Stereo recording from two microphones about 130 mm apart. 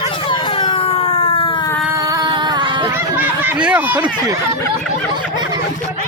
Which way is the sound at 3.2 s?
10° right (ahead or behind).